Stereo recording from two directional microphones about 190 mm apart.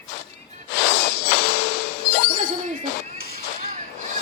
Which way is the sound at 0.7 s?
65° left (ahead or behind).